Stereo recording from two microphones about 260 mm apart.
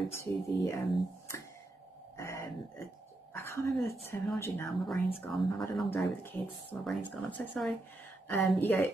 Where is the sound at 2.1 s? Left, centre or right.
Centre.